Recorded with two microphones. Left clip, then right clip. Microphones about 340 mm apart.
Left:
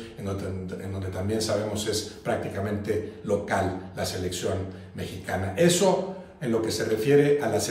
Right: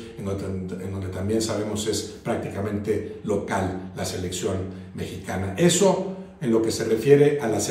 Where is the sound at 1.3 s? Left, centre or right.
Centre.